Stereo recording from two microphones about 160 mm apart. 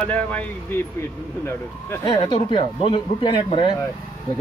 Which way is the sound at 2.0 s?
30° left (ahead or behind).